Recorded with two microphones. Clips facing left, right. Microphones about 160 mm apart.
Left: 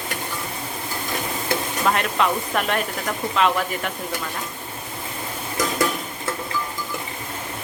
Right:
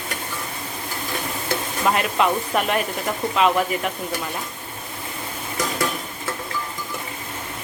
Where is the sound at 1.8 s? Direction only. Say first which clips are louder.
Right 1 dB; 5° right (ahead or behind).